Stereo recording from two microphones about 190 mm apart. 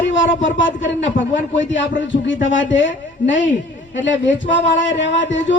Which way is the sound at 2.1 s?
75° left (ahead or behind).